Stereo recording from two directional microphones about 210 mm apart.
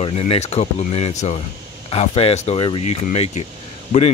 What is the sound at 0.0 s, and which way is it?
Speech, 30° left (ahead or behind).